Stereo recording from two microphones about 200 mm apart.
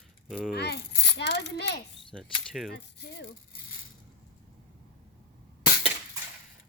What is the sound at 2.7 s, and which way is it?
Speech, 55° left (ahead or behind).